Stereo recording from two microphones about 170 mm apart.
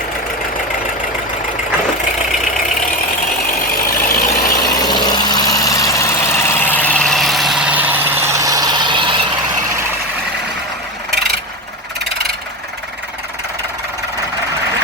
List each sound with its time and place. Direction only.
3.7 s vehicle: 55° left (ahead or behind)
4.8 s vehicle: 25° left (ahead or behind); by 9.2 s 30° right (ahead or behind)